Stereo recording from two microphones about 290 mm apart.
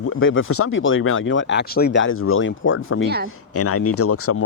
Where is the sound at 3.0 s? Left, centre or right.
Right.